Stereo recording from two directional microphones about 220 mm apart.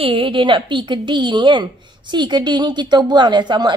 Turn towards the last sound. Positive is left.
turn(degrees=-20)  # may be behind; listen again after turning